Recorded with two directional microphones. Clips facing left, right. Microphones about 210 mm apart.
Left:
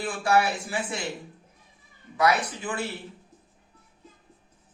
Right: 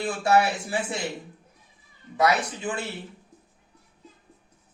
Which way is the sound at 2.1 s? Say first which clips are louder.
Right 1 dB; 25° right (ahead or behind).